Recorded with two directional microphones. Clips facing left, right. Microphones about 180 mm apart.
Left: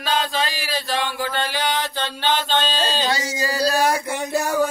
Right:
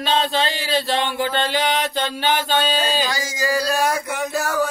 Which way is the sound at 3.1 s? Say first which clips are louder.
Even; 25° left (ahead or behind).